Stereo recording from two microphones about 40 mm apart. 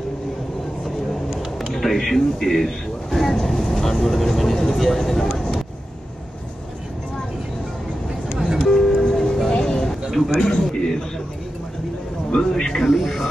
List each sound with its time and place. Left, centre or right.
1.3 s a sound: centre
1.7 s speech: centre
8.4 s music: centre
8.6 s music: centre
10.1 s speech: centre
10.7 s a sound: centre
12.3 s speech: centre
12.8 s speech: centre